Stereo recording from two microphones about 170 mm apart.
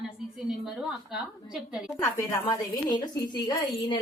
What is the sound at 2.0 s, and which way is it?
A woman's voice, 15° left (ahead or behind).